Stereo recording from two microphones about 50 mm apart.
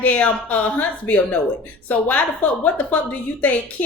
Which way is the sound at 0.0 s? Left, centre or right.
Left.